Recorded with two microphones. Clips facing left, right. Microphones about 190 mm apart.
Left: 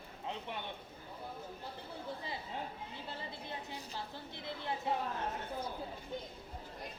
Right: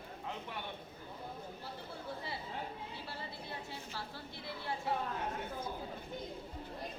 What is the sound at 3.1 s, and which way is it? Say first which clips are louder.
A woman's voice: left 3 dB; 20° left (ahead or behind).